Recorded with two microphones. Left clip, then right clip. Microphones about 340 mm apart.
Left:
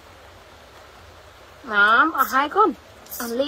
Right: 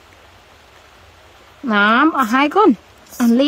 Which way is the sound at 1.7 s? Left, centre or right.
Right.